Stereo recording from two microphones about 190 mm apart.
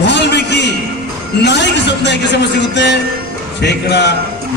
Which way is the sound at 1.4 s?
65° left (ahead or behind).